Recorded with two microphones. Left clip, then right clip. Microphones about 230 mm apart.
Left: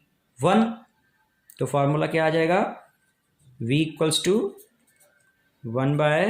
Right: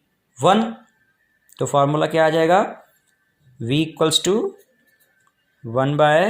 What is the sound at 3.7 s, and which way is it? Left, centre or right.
Speech, right.